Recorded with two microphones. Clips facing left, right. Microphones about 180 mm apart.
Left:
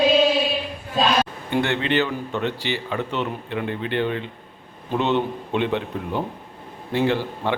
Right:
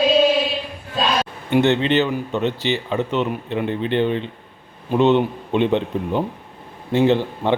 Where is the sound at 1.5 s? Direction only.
20° right (ahead or behind).